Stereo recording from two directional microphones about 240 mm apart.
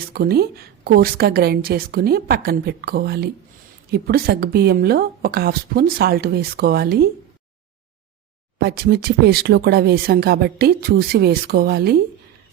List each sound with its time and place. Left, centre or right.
0.1 s speech: right
8.5 s speech: right